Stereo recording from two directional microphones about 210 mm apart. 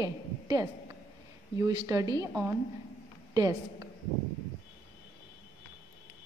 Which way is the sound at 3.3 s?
15° right (ahead or behind).